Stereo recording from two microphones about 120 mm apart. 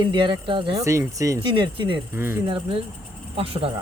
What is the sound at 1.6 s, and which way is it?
Speech, 45° right (ahead or behind).